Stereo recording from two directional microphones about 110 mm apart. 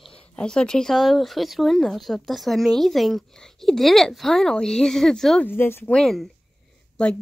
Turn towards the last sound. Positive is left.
turn(degrees=10)  # may be behind; listen again after turning